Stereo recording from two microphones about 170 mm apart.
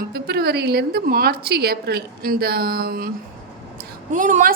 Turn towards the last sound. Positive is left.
turn(degrees=-50)  # may be behind; listen again after turning